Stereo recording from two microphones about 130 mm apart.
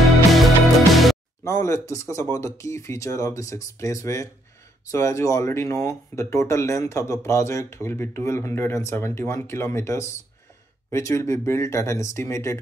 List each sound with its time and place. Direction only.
0.3 s music: centre (ahead or behind)
1.4 s speech: 20° left (ahead or behind)